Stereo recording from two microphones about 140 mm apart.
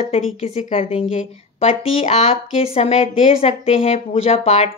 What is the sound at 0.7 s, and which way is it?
Speech, 55° left (ahead or behind).